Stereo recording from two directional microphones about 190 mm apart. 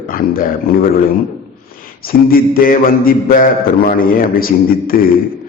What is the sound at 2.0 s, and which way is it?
Mantra, 50° left (ahead or behind).